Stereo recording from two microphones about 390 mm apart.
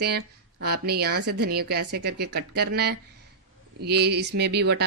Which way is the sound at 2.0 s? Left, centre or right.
Right.